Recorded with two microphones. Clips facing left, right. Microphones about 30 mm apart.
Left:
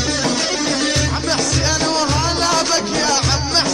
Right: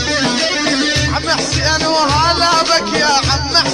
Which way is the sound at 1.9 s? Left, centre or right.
Right.